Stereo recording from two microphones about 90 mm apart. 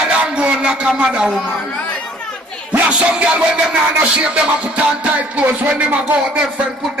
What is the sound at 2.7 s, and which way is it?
Music, 15° right (ahead or behind).